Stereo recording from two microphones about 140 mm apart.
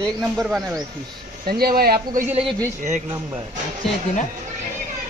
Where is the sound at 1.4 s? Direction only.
90° right.